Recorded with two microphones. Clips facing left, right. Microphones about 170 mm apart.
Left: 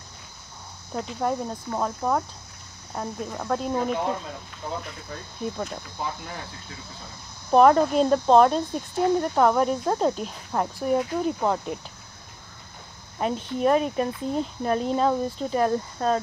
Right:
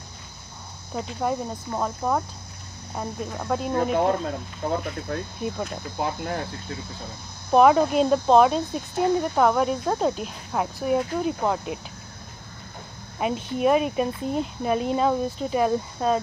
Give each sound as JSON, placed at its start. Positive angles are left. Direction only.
{"t": 0.9, "sound": "speech", "side_deg": 0}
{"t": 3.9, "sound": "speech", "side_deg": -50}
{"t": 5.9, "sound": "cricket", "side_deg": -60}
{"t": 7.5, "sound": "speech", "side_deg": -5}
{"t": 13.2, "sound": "speech", "side_deg": -10}